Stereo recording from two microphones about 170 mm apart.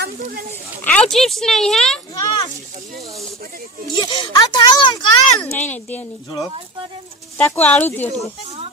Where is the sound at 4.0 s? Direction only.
25° left (ahead or behind).